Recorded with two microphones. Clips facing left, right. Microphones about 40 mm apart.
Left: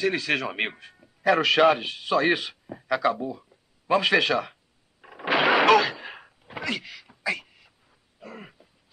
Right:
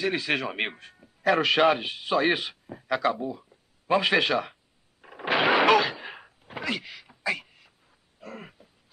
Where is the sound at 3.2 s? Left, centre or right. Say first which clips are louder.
Left 1 dB; centre.